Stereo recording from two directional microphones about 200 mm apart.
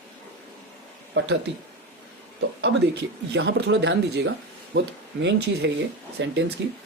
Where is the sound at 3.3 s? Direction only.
60° right (ahead or behind).